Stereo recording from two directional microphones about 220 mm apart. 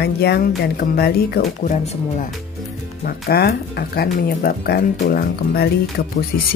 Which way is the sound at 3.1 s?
45° left (ahead or behind).